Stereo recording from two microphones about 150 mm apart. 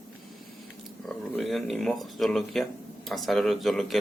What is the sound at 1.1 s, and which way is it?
Speech, centre (ahead or behind).